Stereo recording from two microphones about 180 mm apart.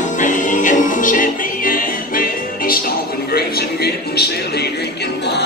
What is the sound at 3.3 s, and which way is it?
A man's voice, 60° left (ahead or behind).